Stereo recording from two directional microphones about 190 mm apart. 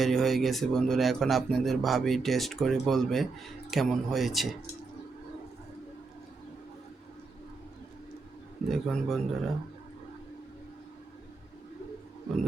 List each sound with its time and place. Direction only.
0.0 s speech: centre (ahead or behind)
8.7 s speech: centre (ahead or behind)